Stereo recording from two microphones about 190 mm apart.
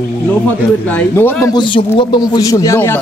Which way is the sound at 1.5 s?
25° left (ahead or behind).